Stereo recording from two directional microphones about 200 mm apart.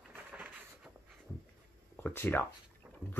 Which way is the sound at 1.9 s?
10° left (ahead or behind).